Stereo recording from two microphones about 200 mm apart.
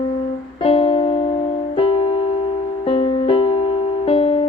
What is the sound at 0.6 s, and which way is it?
Music, 30° left (ahead or behind).